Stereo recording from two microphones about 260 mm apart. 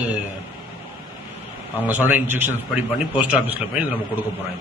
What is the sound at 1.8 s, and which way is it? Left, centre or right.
A man's voice, centre.